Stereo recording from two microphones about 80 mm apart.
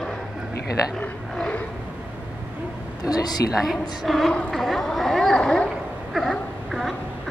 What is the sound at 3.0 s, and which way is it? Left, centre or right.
Speech, left.